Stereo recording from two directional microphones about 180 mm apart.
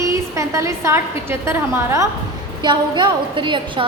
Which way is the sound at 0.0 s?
15° right (ahead or behind).